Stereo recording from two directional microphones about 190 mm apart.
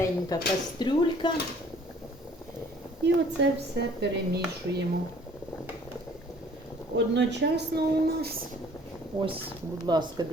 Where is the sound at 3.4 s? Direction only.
65° right (ahead or behind).